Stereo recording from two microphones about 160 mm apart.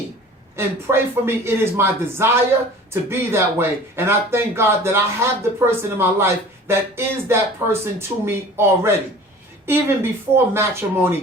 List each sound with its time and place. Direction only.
0.5 s speech: 15° right (ahead or behind)